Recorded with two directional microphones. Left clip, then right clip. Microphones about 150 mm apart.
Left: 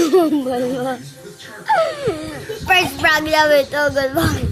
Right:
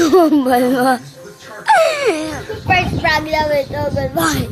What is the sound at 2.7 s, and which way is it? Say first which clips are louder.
Speech: even; 20° left (ahead or behind).